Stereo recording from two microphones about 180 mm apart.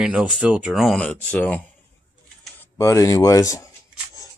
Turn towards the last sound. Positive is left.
turn(degrees=20)  # may be behind; listen again after turning